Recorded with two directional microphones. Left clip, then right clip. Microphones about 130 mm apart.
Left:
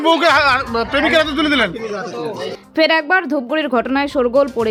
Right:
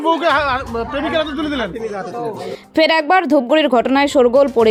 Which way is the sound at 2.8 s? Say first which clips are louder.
Right 1 dB; 35° right (ahead or behind).